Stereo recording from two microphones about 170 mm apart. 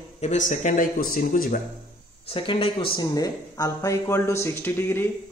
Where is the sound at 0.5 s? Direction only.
50° left (ahead or behind).